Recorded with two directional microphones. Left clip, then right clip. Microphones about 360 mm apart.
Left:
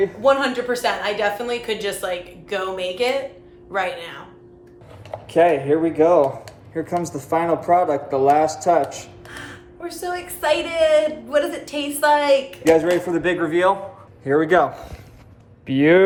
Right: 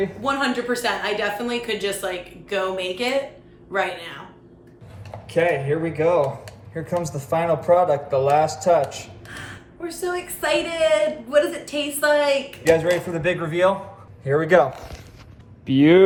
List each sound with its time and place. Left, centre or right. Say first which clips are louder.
0.0 s speech: left 5 dB; centre
5.3 s speech: left 4 dB; centre
15.8 s speech: even; left